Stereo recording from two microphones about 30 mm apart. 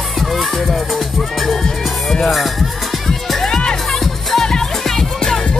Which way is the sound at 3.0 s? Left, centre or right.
Centre.